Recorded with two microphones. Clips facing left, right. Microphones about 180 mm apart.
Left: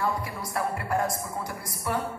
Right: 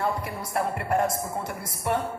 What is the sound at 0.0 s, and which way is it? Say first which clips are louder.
Speech: right 1 dB; 25° right (ahead or behind).